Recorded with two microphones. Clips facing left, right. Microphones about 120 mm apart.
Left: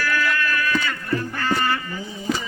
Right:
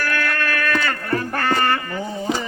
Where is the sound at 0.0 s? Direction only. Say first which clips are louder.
Even; 55° right (ahead or behind).